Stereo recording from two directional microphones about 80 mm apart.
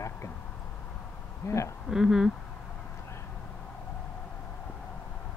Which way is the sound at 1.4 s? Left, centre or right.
Left.